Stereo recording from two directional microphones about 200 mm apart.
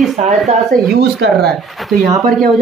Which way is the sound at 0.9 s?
55° right (ahead or behind).